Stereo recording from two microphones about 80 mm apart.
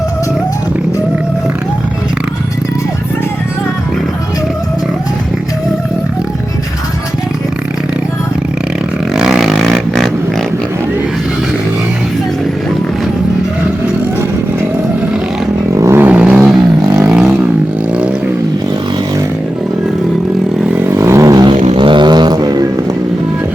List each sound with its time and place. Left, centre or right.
9.1 s a sound: centre
15.7 s vehicle: right
16.0 s vehicle: centre
20.7 s vehicle: right
21.3 s music: right